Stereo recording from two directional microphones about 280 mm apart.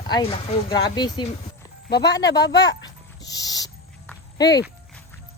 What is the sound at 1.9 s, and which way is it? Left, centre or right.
Speech, left.